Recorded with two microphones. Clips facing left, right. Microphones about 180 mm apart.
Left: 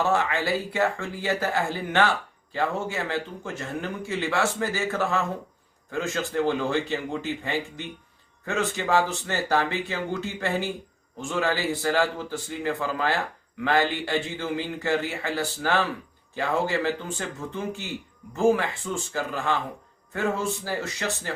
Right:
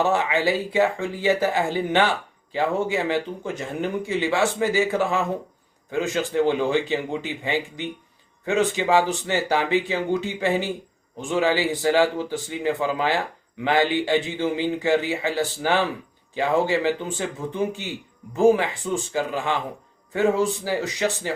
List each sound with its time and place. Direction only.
0.0 s speech: 20° right (ahead or behind)